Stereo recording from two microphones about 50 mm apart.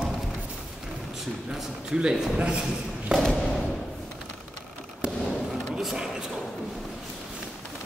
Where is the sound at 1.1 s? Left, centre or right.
Centre.